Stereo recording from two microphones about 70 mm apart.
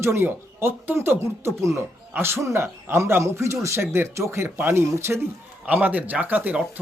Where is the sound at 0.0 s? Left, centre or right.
Right.